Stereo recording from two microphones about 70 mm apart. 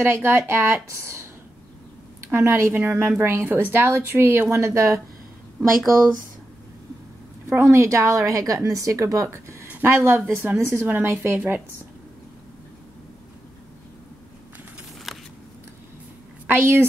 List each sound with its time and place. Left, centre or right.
0.0 s a woman's voice: right
5.6 s speech: centre
7.4 s a woman's voice: right
9.7 s a woman's voice: right
15.1 s scissors: centre
16.4 s a woman's voice: right